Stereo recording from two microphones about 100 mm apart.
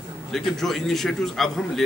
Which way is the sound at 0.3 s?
5° left (ahead or behind).